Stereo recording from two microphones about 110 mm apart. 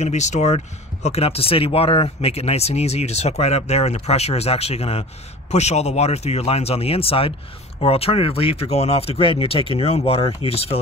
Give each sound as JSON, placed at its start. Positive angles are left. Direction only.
{"t": 0.0, "sound": "speech", "side_deg": 90}
{"t": 1.0, "sound": "speech", "side_deg": 65}
{"t": 5.5, "sound": "speech", "side_deg": 90}